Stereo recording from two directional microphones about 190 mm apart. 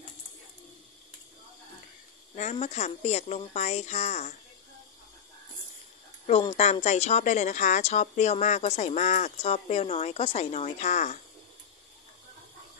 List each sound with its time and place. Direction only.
2.3 s speech: 35° left (ahead or behind)
6.5 s speech: 35° left (ahead or behind)